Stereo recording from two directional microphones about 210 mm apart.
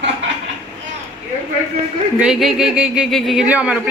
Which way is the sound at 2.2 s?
Centre (ahead or behind).